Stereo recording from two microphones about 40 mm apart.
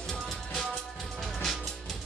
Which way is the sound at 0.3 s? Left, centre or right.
Centre.